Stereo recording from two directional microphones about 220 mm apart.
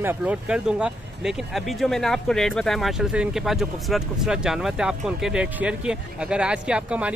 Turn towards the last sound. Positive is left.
turn(degrees=-5)  # may be behind; listen again after turning